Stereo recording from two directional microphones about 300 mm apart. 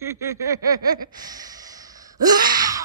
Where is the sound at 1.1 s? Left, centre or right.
Centre.